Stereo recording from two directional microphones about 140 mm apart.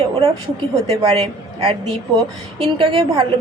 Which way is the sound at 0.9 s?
40° right (ahead or behind).